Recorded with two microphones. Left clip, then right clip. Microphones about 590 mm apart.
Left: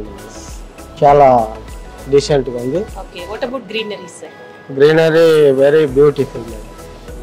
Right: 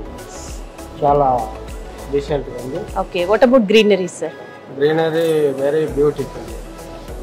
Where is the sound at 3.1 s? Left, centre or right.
Right.